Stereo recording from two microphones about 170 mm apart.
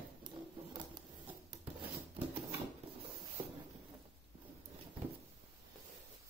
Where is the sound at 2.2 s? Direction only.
10° right (ahead or behind).